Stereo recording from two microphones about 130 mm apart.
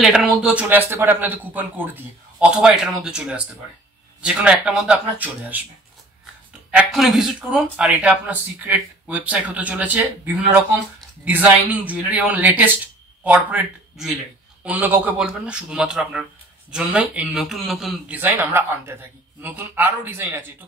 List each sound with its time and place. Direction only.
0.0 s speech: 5° right (ahead or behind)
6.7 s speech: 5° right (ahead or behind)
18.1 s speech: 15° right (ahead or behind)